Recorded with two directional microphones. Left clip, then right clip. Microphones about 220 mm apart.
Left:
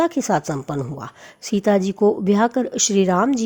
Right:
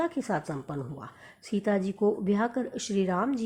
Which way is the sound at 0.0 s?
50° left (ahead or behind).